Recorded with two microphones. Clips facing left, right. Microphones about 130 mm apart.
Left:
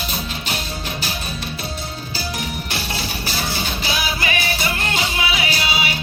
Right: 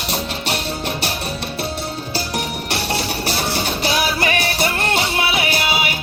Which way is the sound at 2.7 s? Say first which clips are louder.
Right 5 dB; 65° right (ahead or behind).